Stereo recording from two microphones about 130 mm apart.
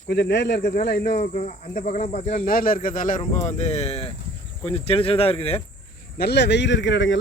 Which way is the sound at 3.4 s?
60° left (ahead or behind).